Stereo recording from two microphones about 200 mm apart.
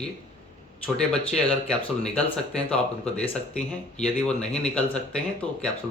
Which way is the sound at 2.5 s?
5° left (ahead or behind).